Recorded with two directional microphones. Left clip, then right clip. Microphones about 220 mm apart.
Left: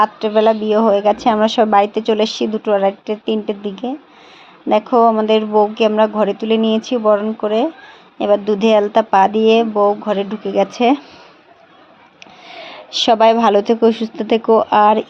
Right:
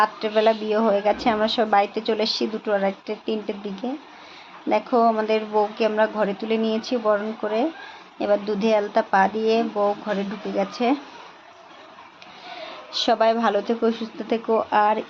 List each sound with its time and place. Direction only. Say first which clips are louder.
0.0 s a woman's voice: left 6 dB; 25° left (ahead or behind)
12.5 s speech: left 7 dB; 35° left (ahead or behind)